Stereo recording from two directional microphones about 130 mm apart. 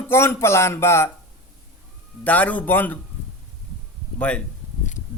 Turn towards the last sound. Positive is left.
turn(degrees=10)  # may be behind; listen again after turning